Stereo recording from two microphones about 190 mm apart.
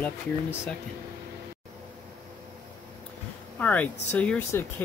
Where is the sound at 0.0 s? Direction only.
10° left (ahead or behind).